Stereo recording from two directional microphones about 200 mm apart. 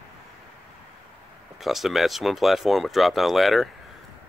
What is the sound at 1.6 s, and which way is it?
Speech, centre (ahead or behind).